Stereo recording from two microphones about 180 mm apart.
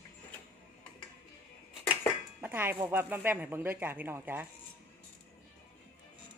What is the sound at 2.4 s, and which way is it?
Music, 10° right (ahead or behind).